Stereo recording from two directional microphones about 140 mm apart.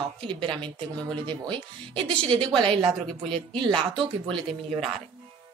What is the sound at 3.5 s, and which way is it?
Speech, 35° right (ahead or behind).